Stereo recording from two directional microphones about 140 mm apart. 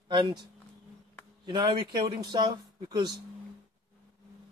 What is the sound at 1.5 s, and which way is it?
Speech, 30° right (ahead or behind).